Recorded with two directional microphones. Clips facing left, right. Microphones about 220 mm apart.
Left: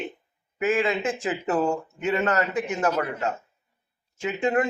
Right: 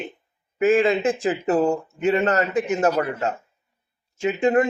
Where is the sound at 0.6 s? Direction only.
30° right (ahead or behind).